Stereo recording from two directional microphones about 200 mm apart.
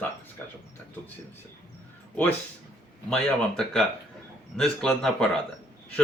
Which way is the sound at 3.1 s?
5° left (ahead or behind).